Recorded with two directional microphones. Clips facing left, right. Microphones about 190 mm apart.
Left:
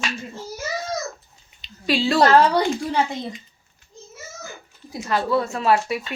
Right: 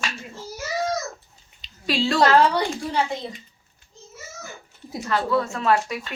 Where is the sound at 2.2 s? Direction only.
40° left (ahead or behind).